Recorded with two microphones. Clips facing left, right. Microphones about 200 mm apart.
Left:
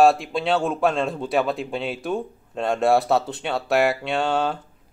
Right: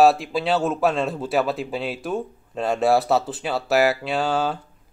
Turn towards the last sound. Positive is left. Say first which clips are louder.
# even
turn(degrees=0)  # may be behind; listen again after turning